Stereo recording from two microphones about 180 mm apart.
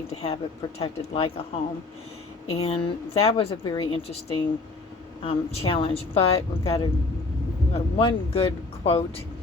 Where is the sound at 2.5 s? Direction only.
30° left (ahead or behind).